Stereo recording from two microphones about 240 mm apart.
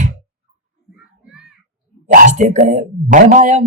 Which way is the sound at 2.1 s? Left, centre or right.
Right.